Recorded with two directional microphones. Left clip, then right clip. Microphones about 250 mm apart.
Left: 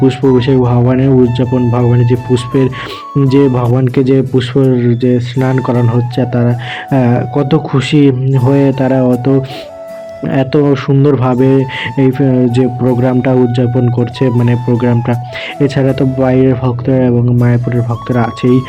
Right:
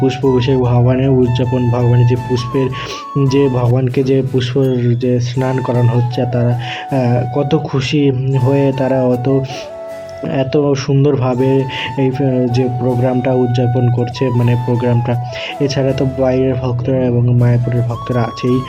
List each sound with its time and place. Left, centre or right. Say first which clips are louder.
0.3 s speech: left 3 dB; centre
1.5 s speech: left 3 dB; centre
2.0 s speech: left 4 dB; centre